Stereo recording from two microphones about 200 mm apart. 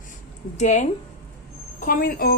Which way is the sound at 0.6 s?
35° left (ahead or behind).